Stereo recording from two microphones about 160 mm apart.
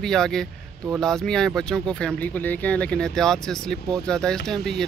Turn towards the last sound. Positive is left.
turn(degrees=0)  # may be behind; listen again after turning